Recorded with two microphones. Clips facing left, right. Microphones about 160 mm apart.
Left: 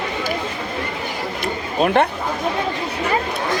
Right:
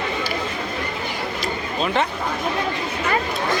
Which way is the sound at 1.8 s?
55° left (ahead or behind).